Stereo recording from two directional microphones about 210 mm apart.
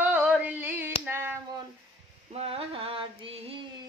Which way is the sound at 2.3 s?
30° right (ahead or behind).